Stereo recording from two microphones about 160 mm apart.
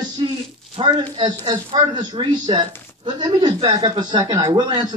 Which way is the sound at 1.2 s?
25° right (ahead or behind).